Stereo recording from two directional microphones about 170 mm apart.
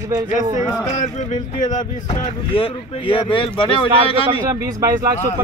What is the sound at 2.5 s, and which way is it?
Speech, 30° left (ahead or behind).